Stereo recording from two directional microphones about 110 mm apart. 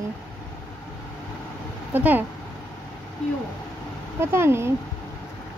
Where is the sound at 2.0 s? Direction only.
15° right (ahead or behind).